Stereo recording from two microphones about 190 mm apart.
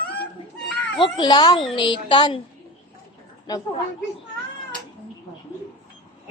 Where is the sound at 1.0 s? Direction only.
20° left (ahead or behind).